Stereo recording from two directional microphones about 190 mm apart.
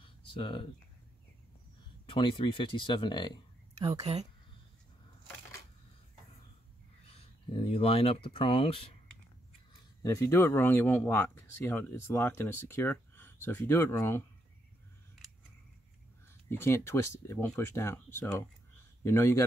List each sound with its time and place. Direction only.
0.0 s a sound: 30° left (ahead or behind)
2.0 s speech: 25° left (ahead or behind)
4.0 s speech: 35° right (ahead or behind)
7.1 s speech: 30° left (ahead or behind)
10.0 s speech: 15° left (ahead or behind)
16.4 s speech: 15° left (ahead or behind)